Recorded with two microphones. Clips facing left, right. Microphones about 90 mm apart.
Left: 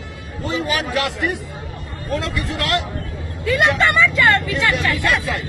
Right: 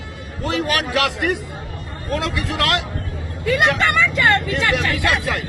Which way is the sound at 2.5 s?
75° right (ahead or behind).